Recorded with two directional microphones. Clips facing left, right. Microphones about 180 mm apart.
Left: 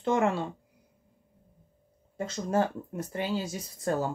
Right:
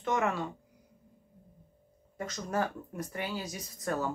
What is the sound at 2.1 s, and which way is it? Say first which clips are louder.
Speech: left 5 dB; 25° left (ahead or behind).